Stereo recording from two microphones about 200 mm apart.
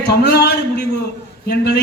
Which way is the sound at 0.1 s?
50° left (ahead or behind).